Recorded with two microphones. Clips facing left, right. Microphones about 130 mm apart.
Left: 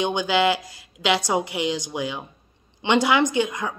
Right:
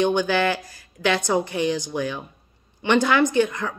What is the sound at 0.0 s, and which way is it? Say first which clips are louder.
A woman's voice: right 1 dB; 15° left (ahead or behind).